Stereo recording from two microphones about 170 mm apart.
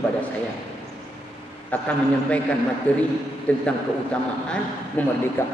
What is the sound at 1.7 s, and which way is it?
A man's voice, 10° left (ahead or behind).